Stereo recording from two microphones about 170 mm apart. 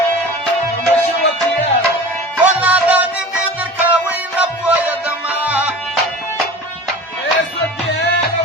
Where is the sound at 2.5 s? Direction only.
10° right (ahead or behind).